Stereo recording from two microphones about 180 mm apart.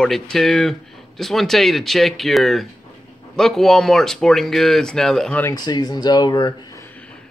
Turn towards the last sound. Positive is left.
turn(degrees=25)  # may be behind; listen again after turning